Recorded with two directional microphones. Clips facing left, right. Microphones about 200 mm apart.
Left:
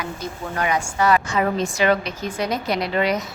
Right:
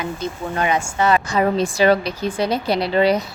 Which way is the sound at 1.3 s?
35° right (ahead or behind).